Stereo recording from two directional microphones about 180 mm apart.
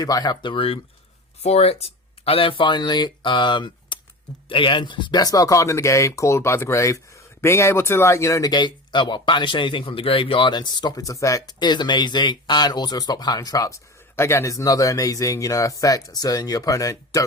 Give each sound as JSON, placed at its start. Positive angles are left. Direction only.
{"t": 0.0, "sound": "speech", "side_deg": 20}